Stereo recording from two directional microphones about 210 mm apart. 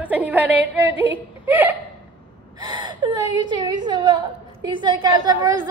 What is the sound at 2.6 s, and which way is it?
A woman's voice, 20° right (ahead or behind).